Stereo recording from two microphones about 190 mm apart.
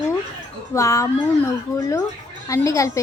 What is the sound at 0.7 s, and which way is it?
A woman's voice, 15° left (ahead or behind).